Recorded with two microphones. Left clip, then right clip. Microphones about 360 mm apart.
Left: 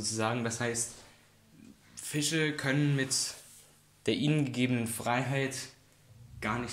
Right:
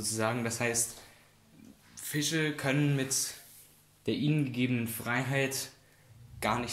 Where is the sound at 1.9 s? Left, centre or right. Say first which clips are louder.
Even; centre.